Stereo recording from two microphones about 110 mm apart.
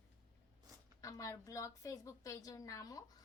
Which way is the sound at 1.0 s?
30° left (ahead or behind).